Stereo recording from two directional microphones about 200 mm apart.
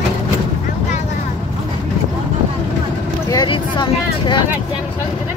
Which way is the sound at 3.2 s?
20° left (ahead or behind).